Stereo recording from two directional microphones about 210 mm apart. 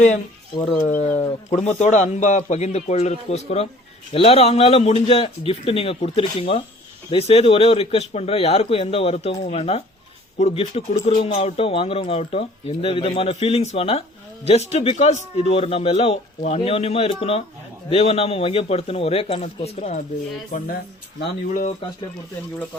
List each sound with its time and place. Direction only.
0.9 s a man's voice: 35° left (ahead or behind)
21.2 s a man's voice: 40° left (ahead or behind)